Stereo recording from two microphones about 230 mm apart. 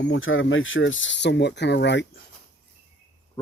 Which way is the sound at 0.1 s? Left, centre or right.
Left.